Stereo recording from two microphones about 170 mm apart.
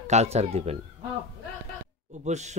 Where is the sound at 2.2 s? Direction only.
45° right (ahead or behind).